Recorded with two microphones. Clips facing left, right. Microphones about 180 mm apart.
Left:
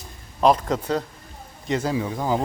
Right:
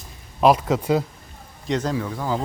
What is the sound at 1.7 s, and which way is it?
Speech, 10° left (ahead or behind).